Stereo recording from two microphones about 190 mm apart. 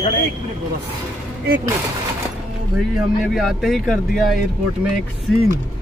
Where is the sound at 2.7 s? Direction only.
Centre (ahead or behind).